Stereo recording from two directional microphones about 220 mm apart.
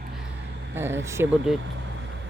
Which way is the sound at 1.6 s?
55° right (ahead or behind).